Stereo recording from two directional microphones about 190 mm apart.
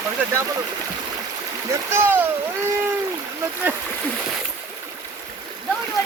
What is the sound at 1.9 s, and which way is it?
Speech, 10° right (ahead or behind).